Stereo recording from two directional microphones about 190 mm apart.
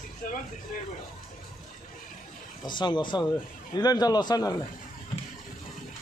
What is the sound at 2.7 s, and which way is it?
Speech, 25° left (ahead or behind).